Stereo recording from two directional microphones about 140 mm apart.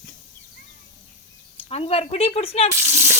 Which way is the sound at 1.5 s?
45° left (ahead or behind).